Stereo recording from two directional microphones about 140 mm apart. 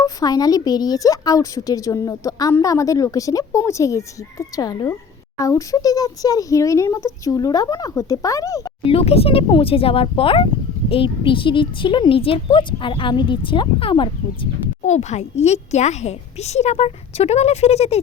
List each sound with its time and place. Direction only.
0.0 s a woman's voice: 25° left (ahead or behind)
8.8 s speech: 45° left (ahead or behind)
14.8 s a child's voice: 55° left (ahead or behind)